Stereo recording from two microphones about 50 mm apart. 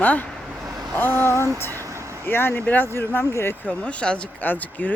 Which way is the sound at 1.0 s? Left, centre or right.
Left.